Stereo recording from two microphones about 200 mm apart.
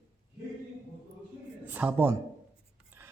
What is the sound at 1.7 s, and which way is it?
Speech, 10° right (ahead or behind).